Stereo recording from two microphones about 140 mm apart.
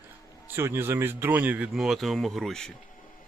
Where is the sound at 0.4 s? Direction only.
15° right (ahead or behind).